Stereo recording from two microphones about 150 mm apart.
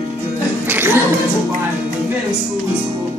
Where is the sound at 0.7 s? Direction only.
15° right (ahead or behind).